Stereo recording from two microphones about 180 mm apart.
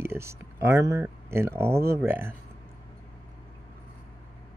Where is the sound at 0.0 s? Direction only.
15° right (ahead or behind).